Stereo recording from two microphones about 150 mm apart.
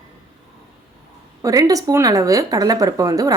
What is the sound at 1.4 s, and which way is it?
Speech, 25° right (ahead or behind).